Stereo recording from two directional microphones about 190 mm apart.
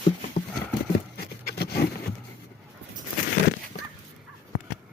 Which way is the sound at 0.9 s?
55° left (ahead or behind).